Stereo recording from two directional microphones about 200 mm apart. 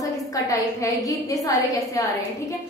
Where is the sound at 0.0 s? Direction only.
15° left (ahead or behind).